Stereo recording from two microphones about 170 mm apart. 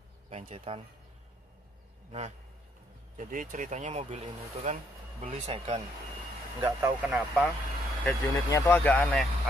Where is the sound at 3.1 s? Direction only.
50° right (ahead or behind); by 5.8 s 35° right (ahead or behind).